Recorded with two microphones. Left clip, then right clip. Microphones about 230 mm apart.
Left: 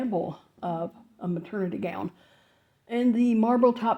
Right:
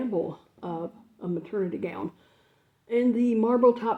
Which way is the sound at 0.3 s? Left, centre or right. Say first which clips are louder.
Left 3 dB; left.